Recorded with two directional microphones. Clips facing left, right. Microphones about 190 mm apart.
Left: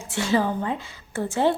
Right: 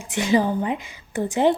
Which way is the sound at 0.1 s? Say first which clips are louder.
Right 3 dB; 15° right (ahead or behind).